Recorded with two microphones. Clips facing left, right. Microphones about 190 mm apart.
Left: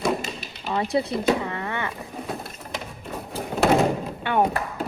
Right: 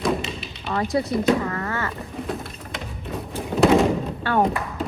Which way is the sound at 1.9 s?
Centre (ahead or behind).